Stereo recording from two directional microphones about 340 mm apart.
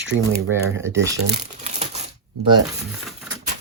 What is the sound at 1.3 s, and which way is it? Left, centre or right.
Crumpling, centre.